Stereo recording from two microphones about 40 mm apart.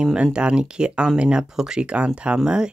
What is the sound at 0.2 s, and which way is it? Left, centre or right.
Speech, right.